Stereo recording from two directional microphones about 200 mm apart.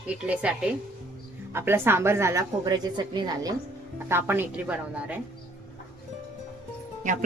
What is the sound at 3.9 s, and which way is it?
A woman's voice, 10° right (ahead or behind).